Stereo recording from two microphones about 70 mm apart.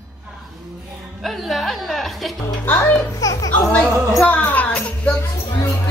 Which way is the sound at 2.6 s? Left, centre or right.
Left.